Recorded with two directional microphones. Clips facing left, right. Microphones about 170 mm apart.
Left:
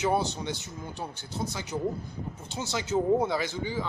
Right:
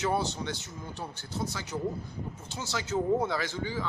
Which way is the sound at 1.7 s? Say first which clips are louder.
Left 3 dB; 15° left (ahead or behind).